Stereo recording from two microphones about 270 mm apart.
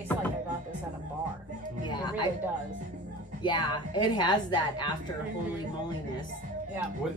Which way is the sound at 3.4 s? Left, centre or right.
Centre.